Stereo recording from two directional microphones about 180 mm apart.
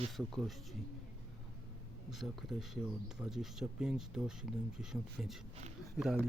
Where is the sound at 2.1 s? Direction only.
Centre (ahead or behind).